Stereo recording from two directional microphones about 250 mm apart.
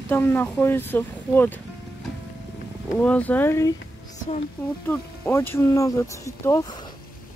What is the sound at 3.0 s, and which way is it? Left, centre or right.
Speech, centre.